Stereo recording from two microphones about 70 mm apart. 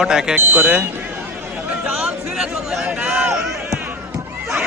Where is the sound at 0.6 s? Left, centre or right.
Right.